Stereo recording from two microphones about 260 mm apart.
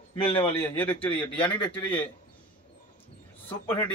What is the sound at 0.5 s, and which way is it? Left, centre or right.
Speech, centre.